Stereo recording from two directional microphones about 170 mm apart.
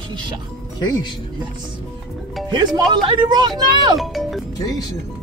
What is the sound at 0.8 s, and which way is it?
Speech, 25° left (ahead or behind).